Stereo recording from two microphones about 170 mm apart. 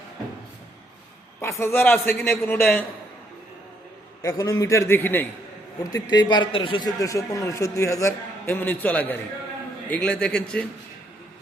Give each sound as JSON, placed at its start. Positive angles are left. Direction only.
{"t": 1.4, "sound": "a man's voice", "side_deg": 15}
{"t": 4.2, "sound": "a man's voice", "side_deg": 20}
{"t": 5.9, "sound": "a man's voice", "side_deg": 25}